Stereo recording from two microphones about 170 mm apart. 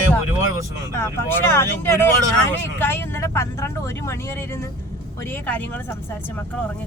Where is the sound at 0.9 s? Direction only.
15° left (ahead or behind).